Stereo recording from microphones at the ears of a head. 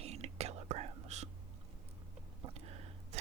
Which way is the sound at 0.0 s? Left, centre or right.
Right.